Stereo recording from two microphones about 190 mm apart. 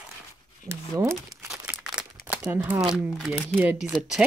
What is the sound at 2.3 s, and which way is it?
Speech, 10° right (ahead or behind).